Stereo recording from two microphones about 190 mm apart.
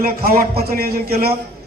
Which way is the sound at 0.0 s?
50° right (ahead or behind).